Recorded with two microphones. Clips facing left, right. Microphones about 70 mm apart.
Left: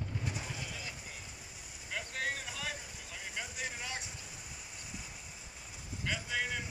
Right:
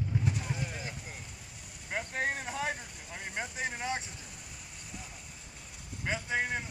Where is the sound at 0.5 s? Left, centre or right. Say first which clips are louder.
Right 5 dB; right.